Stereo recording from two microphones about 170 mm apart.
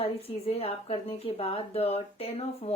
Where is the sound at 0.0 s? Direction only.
35° left (ahead or behind).